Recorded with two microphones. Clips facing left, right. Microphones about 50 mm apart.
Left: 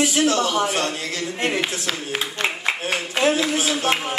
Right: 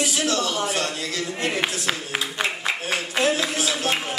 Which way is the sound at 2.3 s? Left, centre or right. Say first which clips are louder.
Left 2 dB; centre.